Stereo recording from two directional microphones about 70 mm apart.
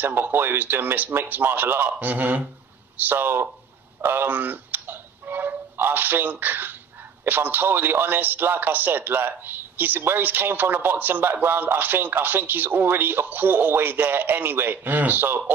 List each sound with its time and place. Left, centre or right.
0.0 s speech: right
4.0 s tick: right
7.2 s speech: right